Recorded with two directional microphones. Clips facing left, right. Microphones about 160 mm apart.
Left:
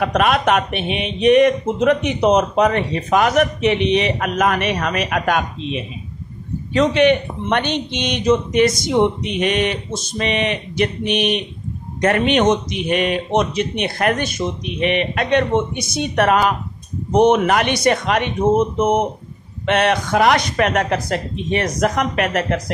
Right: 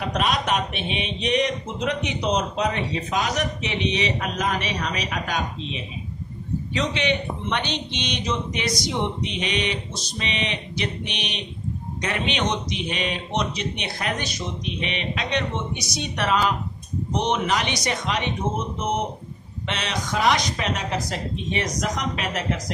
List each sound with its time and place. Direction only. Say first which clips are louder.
0.0 s a man's voice: left 8 dB; 60° left (ahead or behind)